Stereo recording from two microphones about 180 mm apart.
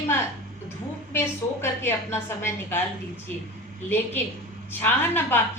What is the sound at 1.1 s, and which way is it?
A woman's voice, 15° left (ahead or behind).